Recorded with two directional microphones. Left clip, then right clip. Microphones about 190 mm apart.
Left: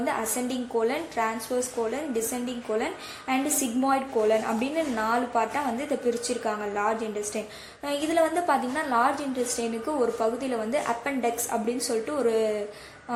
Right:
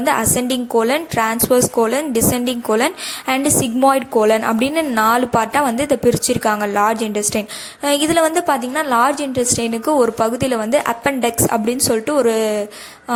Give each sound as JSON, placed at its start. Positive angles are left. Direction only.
{"t": 0.0, "sound": "a woman's voice", "side_deg": -35}